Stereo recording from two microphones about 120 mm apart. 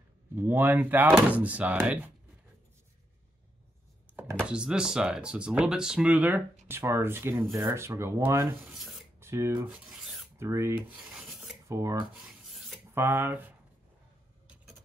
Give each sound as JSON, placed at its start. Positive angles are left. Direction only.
{"t": 0.4, "sound": "speech", "side_deg": -15}
{"t": 4.5, "sound": "speech", "side_deg": -5}
{"t": 8.6, "sound": "speech", "side_deg": 0}
{"t": 9.2, "sound": "speech", "side_deg": -25}
{"t": 9.8, "sound": "filing", "side_deg": 0}
{"t": 10.3, "sound": "speech", "side_deg": -20}
{"t": 10.9, "sound": "rub", "side_deg": -5}
{"t": 11.7, "sound": "speech", "side_deg": -25}
{"t": 12.1, "sound": "rub", "side_deg": -5}
{"t": 12.9, "sound": "speech", "side_deg": -20}